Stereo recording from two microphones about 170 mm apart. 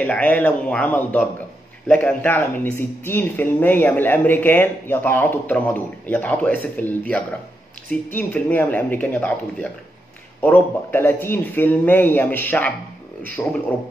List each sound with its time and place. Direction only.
0.0 s speech: 10° left (ahead or behind)